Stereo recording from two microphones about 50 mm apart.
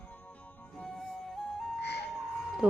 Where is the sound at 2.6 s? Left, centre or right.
Right.